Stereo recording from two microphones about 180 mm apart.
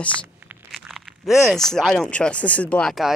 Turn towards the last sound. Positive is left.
turn(degrees=0)  # may be behind; listen again after turning